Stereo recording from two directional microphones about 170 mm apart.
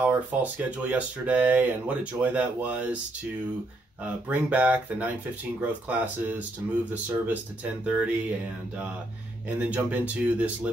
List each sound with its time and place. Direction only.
0.0 s speech: 10° right (ahead or behind)
4.0 s speech: 10° right (ahead or behind)